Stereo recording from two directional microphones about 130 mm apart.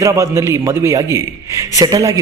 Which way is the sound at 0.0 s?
25° right (ahead or behind).